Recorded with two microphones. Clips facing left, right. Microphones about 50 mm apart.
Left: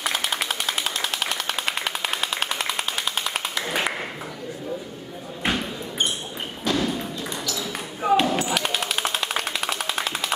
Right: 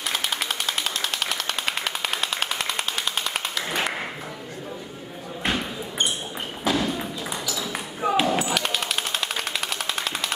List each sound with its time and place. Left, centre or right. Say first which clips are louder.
0.0 s jackhammer: left 2 dB; centre
5.4 s basketball bounce: left 1 dB; centre
6.6 s ping: even; centre